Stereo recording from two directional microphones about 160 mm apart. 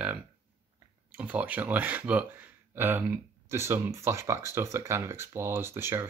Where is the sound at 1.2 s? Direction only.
10° right (ahead or behind).